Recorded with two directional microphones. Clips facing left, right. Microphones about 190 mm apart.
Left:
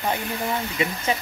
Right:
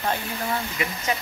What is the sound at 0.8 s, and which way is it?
Speech, 25° left (ahead or behind).